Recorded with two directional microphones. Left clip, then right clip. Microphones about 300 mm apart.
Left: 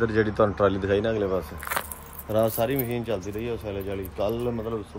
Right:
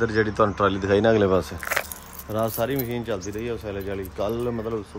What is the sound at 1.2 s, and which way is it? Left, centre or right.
Speech, right.